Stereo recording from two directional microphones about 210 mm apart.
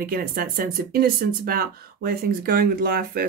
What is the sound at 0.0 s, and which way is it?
Speech, 45° right (ahead or behind).